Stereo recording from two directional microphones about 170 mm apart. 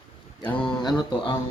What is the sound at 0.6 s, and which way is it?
Speech, 25° left (ahead or behind).